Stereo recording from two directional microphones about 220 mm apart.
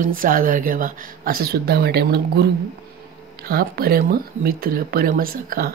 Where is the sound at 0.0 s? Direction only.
40° right (ahead or behind).